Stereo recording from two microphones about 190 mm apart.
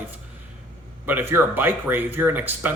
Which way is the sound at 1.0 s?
10° right (ahead or behind).